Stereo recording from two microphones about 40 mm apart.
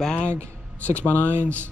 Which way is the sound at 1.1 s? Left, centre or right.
Right.